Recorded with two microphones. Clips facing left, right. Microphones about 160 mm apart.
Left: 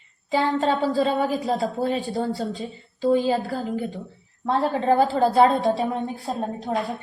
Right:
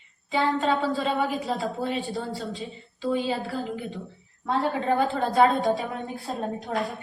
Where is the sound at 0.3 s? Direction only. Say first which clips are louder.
Left 2 dB; 40° left (ahead or behind).